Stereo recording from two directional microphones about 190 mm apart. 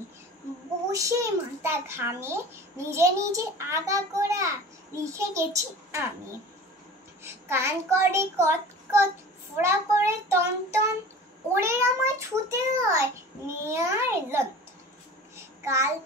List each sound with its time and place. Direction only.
0.9 s child singing: 15° right (ahead or behind)
7.2 s child singing: 15° right (ahead or behind)